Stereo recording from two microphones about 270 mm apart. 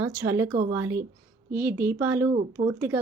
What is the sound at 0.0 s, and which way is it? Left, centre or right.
A woman's voice, centre.